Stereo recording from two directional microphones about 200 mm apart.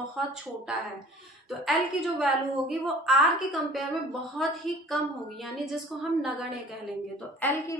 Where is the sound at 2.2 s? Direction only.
Centre (ahead or behind).